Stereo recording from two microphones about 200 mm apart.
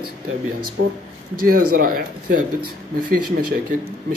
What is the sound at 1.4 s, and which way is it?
Speech, 45° right (ahead or behind).